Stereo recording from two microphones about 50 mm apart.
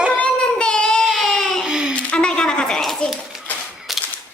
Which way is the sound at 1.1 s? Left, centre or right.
Centre.